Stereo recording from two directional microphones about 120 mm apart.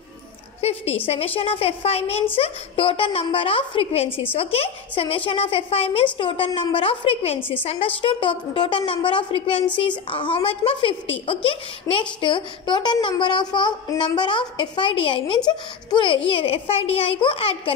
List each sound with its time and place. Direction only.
0.6 s a woman's voice: 60° left (ahead or behind)